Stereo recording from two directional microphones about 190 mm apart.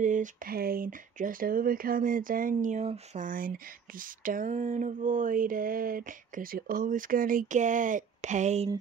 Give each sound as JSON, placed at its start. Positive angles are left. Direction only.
{"t": 0.0, "sound": "speech", "side_deg": -40}